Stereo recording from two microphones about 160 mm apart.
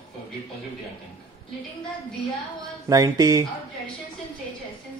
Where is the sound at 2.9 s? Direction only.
20° right (ahead or behind).